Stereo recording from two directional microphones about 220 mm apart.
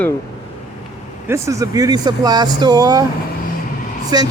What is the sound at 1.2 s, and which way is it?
Speech, 15° right (ahead or behind).